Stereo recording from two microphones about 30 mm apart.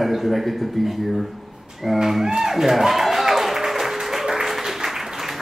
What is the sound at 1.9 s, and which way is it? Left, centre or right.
Speech, centre.